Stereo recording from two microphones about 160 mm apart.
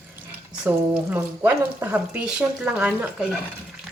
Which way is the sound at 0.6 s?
10° right (ahead or behind).